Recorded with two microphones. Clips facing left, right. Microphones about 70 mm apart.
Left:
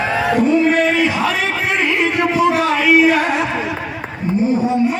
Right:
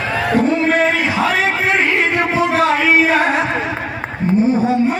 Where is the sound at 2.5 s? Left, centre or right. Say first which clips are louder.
Even; right.